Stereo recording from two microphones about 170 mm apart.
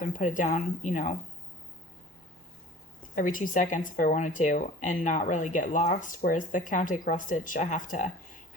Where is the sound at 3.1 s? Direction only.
50° left (ahead or behind).